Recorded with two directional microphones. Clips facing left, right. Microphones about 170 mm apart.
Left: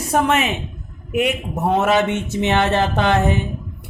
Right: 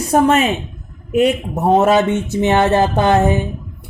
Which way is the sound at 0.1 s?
35° right (ahead or behind).